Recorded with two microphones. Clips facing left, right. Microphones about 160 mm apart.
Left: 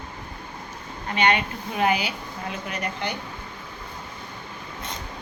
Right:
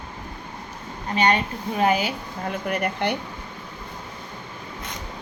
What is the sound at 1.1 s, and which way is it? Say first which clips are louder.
A woman's voice: right 1 dB; 40° right (ahead or behind).